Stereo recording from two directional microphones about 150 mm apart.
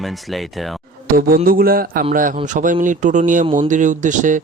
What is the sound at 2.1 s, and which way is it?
Speech, 65° right (ahead or behind).